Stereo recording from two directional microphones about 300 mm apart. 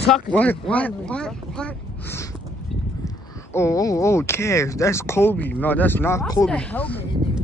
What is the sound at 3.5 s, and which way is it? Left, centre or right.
Speech, centre.